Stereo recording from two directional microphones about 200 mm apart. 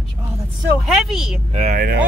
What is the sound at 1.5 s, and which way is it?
Speech, 30° right (ahead or behind).